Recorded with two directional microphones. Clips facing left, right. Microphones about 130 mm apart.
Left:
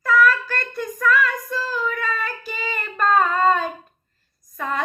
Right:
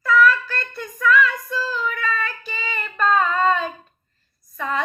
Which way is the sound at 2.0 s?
45° left (ahead or behind).